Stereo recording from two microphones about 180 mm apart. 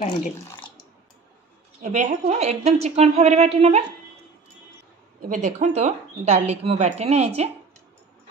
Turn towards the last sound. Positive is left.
turn(degrees=-35)  # may be behind; listen again after turning